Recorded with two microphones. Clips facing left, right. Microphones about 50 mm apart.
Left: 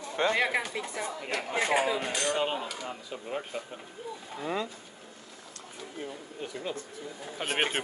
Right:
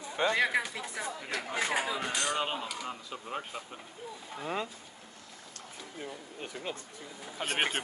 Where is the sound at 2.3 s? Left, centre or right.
Centre.